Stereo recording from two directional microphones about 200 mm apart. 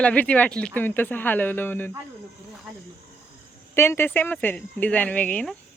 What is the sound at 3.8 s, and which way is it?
Speech, 10° left (ahead or behind).